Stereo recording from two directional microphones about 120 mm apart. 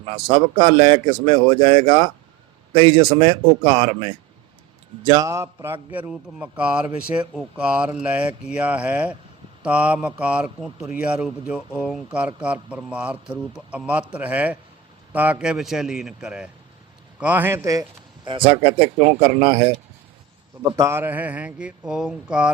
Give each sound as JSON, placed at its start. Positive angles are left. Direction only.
{"t": 0.1, "sound": "speech", "side_deg": -45}
{"t": 5.0, "sound": "a man's voice", "side_deg": -30}
{"t": 11.7, "sound": "speech", "side_deg": 20}
{"t": 12.1, "sound": "a man's voice", "side_deg": -10}
{"t": 18.3, "sound": "speech", "side_deg": -45}
{"t": 20.7, "sound": "a man's voice", "side_deg": -25}